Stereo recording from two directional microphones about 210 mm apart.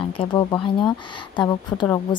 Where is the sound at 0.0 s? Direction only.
25° left (ahead or behind).